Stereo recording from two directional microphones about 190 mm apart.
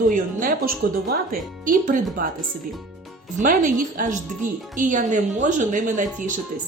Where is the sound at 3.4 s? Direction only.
45° right (ahead or behind).